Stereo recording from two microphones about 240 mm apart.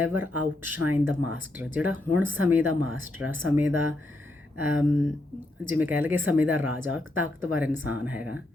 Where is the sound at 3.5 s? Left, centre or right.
Centre.